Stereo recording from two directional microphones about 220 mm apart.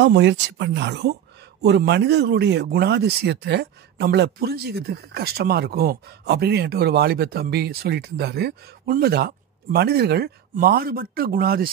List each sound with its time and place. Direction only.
0.0 s speech: 50° right (ahead or behind)